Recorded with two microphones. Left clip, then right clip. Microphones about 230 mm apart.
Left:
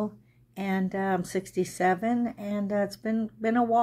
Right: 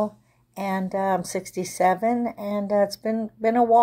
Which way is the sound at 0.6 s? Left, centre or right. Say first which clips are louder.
Right 5 dB; centre.